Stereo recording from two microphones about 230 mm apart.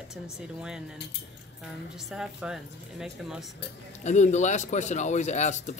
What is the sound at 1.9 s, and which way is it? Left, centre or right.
A woman's voice, centre.